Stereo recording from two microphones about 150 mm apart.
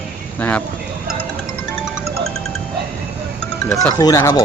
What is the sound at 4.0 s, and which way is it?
Speech, 25° left (ahead or behind).